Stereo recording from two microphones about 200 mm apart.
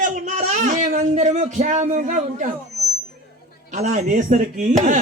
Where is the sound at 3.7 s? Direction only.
35° right (ahead or behind).